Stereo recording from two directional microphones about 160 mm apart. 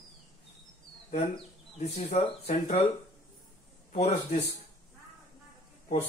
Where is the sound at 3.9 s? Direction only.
40° left (ahead or behind).